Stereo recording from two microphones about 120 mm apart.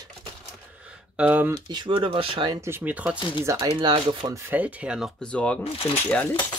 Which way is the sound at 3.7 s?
40° right (ahead or behind).